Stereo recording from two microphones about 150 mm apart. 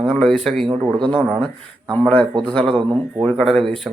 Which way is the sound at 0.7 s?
30° right (ahead or behind).